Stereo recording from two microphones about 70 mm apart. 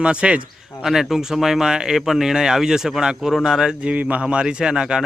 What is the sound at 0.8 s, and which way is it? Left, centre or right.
Speech, centre.